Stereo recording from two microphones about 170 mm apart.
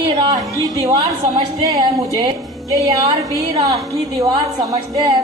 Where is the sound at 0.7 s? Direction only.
20° right (ahead or behind).